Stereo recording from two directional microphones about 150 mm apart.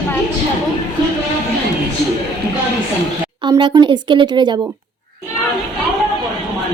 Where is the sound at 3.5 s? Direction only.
35° right (ahead or behind).